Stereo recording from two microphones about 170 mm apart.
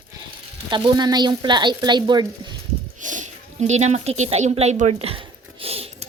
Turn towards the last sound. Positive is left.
turn(degrees=-35)  # may be behind; listen again after turning